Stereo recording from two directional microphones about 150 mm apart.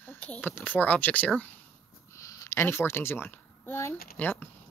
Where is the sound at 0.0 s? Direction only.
10° left (ahead or behind).